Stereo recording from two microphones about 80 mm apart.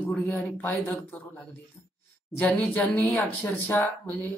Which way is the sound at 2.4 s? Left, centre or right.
Left.